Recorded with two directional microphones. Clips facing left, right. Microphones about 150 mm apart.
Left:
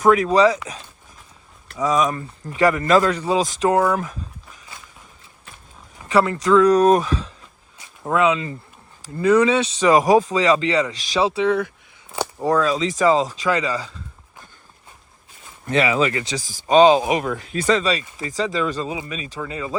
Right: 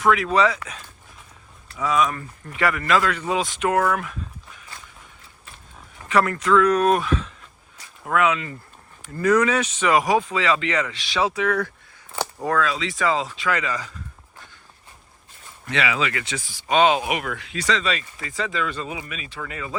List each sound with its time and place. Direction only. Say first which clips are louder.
0.0 s speech: left 4 dB; 40° left (ahead or behind)
1.7 s speech: left 2 dB; 40° left (ahead or behind)
2.0 s speech: left 5 dB; 20° left (ahead or behind)
2.6 s speech: left 5 dB; 35° left (ahead or behind)
6.1 s speech: left 3 dB; 30° left (ahead or behind)
7.8 s a sound: left 2 dB; 25° left (ahead or behind)
9.1 s speech: left 3 dB; 30° left (ahead or behind)
12.1 s a sound: left 3 dB; 10° left (ahead or behind)
12.5 s speech: left 5 dB; 40° left (ahead or behind)
15.6 s speech: left 6 dB; 45° left (ahead or behind); by 19.7 s 25° left (ahead or behind)